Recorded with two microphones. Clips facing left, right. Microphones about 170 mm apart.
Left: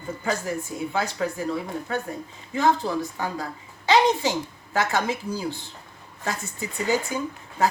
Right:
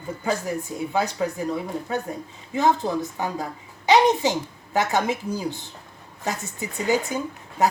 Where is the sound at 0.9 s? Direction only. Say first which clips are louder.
Right 3 dB; 15° right (ahead or behind).